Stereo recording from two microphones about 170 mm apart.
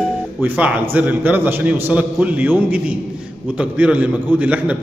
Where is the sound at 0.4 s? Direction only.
10° right (ahead or behind).